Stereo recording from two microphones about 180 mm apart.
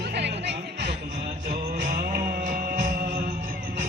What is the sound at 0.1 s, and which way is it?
Music, 70° right (ahead or behind).